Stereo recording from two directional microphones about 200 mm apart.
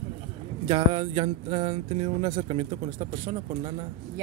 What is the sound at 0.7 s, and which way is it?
Speech, 30° right (ahead or behind).